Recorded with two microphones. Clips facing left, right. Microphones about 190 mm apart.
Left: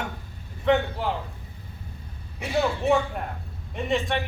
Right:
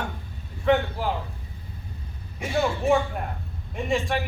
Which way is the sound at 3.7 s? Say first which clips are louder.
Even; centre (ahead or behind).